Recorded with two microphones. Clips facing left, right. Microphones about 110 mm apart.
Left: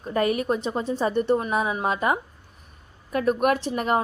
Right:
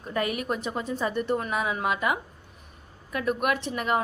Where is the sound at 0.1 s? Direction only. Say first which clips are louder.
Left 5 dB; 35° left (ahead or behind).